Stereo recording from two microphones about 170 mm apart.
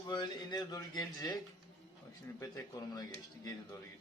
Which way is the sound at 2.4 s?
20° left (ahead or behind).